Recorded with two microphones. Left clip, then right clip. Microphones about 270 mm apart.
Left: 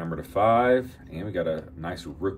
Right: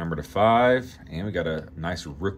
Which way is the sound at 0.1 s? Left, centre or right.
Right.